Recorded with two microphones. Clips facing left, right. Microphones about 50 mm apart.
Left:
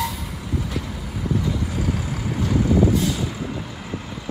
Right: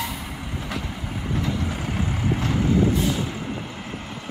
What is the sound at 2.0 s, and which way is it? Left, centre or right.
Vehicle, right.